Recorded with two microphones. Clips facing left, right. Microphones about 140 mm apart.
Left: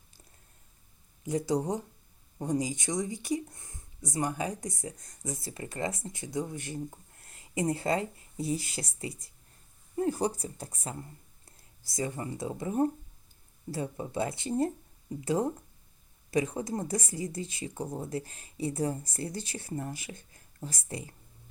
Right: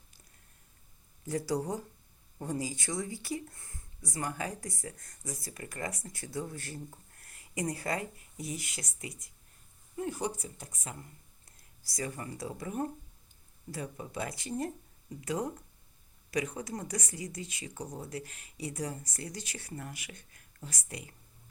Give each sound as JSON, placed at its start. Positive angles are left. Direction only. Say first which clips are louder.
{"t": 1.2, "sound": "speech", "louder": "left 3 dB", "side_deg": 20}